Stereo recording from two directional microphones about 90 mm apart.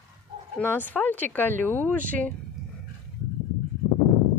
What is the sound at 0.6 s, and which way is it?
Speech, 20° left (ahead or behind).